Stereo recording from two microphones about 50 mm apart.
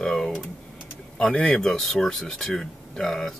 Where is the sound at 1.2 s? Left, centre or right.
Centre.